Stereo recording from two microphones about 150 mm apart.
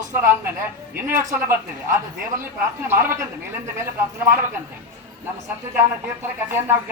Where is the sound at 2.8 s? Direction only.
15° right (ahead or behind).